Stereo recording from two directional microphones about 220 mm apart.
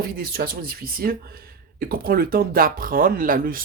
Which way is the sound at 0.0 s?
40° right (ahead or behind).